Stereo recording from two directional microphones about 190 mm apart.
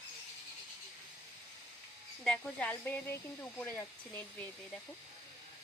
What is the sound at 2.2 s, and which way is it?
Speech, 5° left (ahead or behind).